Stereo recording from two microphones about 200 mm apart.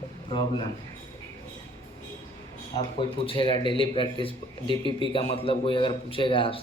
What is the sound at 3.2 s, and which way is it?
A man's voice, 25° left (ahead or behind).